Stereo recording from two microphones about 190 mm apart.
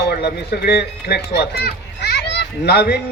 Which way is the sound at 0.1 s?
55° left (ahead or behind).